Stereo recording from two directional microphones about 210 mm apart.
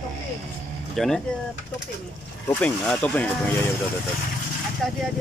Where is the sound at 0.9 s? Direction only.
Centre (ahead or behind).